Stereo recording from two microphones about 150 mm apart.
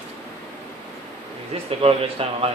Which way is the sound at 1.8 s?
40° right (ahead or behind).